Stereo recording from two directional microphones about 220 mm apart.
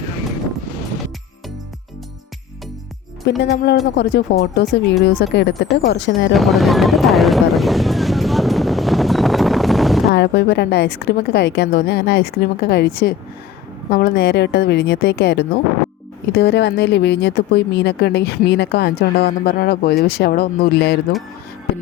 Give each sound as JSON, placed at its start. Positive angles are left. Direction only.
{"t": 3.2, "sound": "speech", "side_deg": 50}
{"t": 6.3, "sound": "a sound", "side_deg": 0}
{"t": 10.1, "sound": "speech", "side_deg": 50}